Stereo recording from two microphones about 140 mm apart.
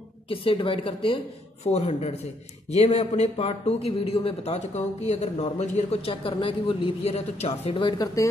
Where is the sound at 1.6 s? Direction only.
50° left (ahead or behind); by 8.0 s 35° left (ahead or behind).